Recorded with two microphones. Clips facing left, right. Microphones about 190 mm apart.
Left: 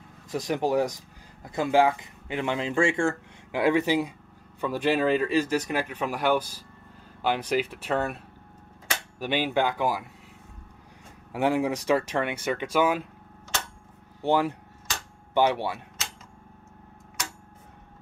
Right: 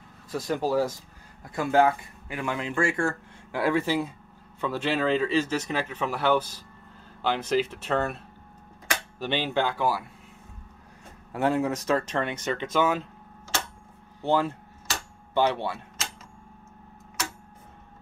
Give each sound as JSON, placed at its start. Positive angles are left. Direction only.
{"t": 0.3, "sound": "a man's voice", "side_deg": 20}
{"t": 9.2, "sound": "a man's voice", "side_deg": 10}
{"t": 11.3, "sound": "a man's voice", "side_deg": 15}
{"t": 14.2, "sound": "a man's voice", "side_deg": 15}